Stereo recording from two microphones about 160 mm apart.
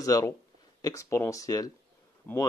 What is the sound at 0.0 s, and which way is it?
A man's voice, 20° left (ahead or behind).